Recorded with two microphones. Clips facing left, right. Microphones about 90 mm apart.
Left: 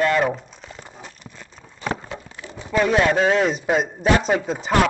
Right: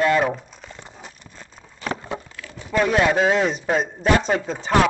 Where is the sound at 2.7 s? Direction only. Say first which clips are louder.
Even; centre (ahead or behind).